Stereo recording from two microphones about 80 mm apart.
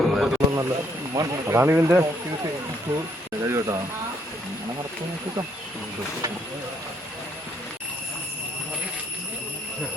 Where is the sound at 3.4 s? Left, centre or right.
Right.